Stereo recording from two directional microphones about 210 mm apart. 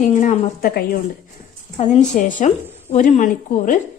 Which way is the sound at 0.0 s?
35° left (ahead or behind).